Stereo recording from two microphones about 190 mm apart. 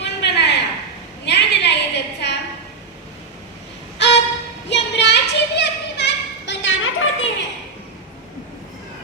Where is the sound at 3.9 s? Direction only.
65° left (ahead or behind).